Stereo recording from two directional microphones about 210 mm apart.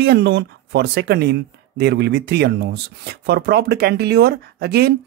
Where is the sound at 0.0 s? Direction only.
50° right (ahead or behind).